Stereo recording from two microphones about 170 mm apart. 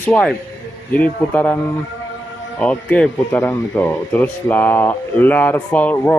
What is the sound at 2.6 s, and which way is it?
Speech, 10° left (ahead or behind).